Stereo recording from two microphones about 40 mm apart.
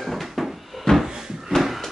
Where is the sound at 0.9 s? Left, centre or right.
Centre.